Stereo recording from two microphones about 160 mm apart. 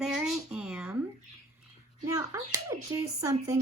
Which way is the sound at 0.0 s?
5° right (ahead or behind).